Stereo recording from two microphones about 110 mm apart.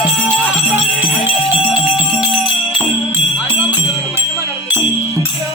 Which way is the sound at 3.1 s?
15° right (ahead or behind).